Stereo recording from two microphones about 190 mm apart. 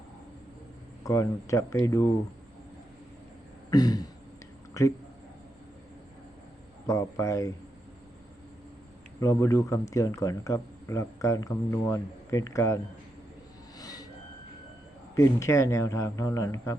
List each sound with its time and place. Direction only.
1.0 s speech: 15° left (ahead or behind)
3.7 s throat clearing: 20° left (ahead or behind)
4.8 s speech: 15° left (ahead or behind)
6.8 s speech: 15° left (ahead or behind)
9.2 s speech: 15° left (ahead or behind)
13.7 s vehicle: 20° left (ahead or behind)
15.1 s speech: 15° left (ahead or behind)